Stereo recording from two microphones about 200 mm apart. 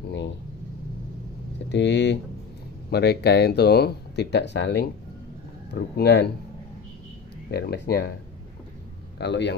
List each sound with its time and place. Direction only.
1.7 s speech: 60° left (ahead or behind)
7.5 s speech: 55° left (ahead or behind)
9.2 s speech: 60° left (ahead or behind)